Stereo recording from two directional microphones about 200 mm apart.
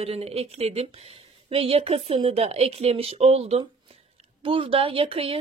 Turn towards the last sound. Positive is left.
turn(degrees=-25)  # may be behind; listen again after turning